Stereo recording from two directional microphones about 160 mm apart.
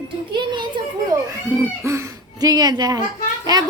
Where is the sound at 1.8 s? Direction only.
20° right (ahead or behind).